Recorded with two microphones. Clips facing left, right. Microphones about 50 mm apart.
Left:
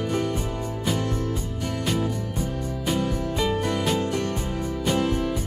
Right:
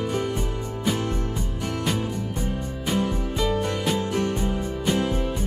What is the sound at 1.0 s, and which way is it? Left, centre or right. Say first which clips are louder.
Music: even; right.